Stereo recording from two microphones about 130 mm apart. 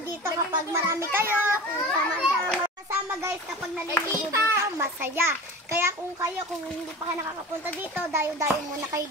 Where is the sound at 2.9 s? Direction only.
15° right (ahead or behind).